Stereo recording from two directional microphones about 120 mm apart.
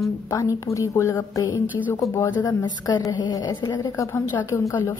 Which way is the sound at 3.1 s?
35° left (ahead or behind).